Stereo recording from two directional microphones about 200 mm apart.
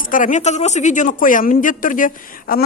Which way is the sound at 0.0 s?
40° left (ahead or behind).